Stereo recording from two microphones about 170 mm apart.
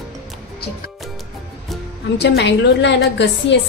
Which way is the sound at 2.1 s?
80° left.